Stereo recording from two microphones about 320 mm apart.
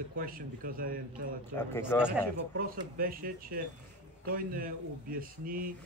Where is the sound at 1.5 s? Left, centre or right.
Centre.